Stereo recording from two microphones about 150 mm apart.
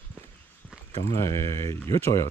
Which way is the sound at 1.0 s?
20° left (ahead or behind).